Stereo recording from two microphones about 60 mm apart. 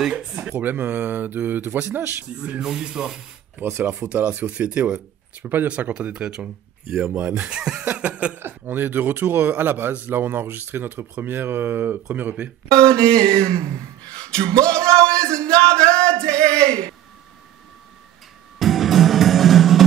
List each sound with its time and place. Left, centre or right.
0.6 s a man's voice: right
2.3 s speech: right
7.8 s speech: right
8.4 s a man's voice: right
12.7 s speech: centre
14.7 s music: centre
18.6 s music: centre